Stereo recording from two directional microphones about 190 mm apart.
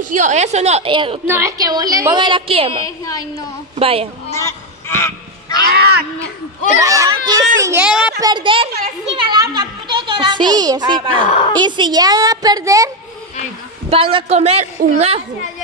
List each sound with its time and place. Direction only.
0.0 s a woman's voice: 40° right (ahead or behind)
1.2 s a woman's voice: 15° right (ahead or behind)
3.1 s a woman's voice: 15° left (ahead or behind)
3.7 s a woman's voice: 30° right (ahead or behind)
4.3 s honk: 15° left (ahead or behind)
5.7 s a sound: 55° right (ahead or behind)
6.8 s a child's voice: 15° right (ahead or behind)
7.6 s speech: 10° right (ahead or behind)
8.2 s a woman's voice: 25° right (ahead or behind)
13.8 s a woman's voice: 30° right (ahead or behind)